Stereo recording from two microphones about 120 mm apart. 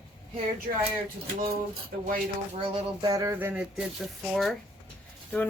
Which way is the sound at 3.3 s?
15° right (ahead or behind).